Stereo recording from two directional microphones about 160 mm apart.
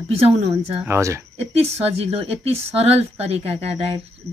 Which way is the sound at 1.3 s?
40° right (ahead or behind).